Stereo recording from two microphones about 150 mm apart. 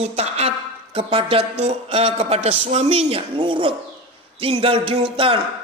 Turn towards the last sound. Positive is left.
turn(degrees=-35)  # may be behind; listen again after turning